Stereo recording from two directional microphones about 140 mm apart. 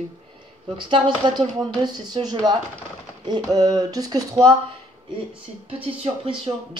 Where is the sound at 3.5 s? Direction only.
25° right (ahead or behind).